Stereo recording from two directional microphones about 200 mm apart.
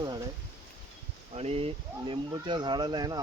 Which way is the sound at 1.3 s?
30° right (ahead or behind).